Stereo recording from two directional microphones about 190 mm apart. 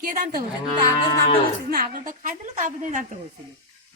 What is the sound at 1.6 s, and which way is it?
A woman's voice, 50° right (ahead or behind).